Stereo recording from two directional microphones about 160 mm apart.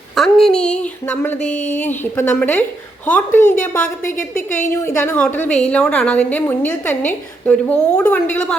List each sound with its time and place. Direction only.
0.2 s speech: centre (ahead or behind)
0.5 s a sound: 5° left (ahead or behind)
1.4 s a woman's voice: 45° left (ahead or behind)
1.7 s a woman's voice: 10° left (ahead or behind)
4.4 s a woman's voice: 50° left (ahead or behind)
4.9 s a woman's voice: 10° left (ahead or behind)